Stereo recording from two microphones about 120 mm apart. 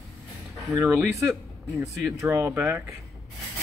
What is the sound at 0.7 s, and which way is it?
Speech, 20° right (ahead or behind).